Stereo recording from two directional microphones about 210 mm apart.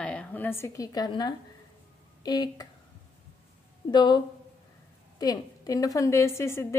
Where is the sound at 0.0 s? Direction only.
5° left (ahead or behind).